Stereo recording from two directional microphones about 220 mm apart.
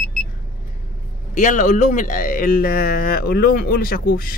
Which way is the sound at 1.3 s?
35° left (ahead or behind).